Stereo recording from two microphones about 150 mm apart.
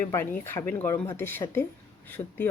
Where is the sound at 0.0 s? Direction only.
15° left (ahead or behind).